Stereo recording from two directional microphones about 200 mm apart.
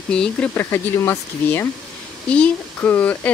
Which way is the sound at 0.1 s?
5° left (ahead or behind).